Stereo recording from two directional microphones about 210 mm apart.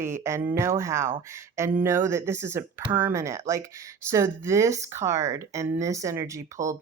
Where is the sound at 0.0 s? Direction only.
15° right (ahead or behind).